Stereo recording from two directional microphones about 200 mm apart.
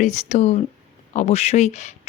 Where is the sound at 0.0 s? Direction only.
35° left (ahead or behind).